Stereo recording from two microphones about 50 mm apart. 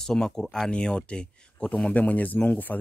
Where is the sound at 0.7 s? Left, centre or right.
Centre.